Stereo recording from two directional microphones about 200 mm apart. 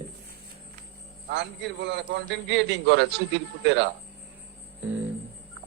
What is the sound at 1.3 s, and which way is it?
A man's voice, 60° right (ahead or behind).